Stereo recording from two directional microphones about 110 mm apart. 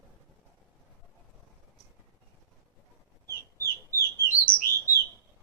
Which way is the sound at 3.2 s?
20° left (ahead or behind).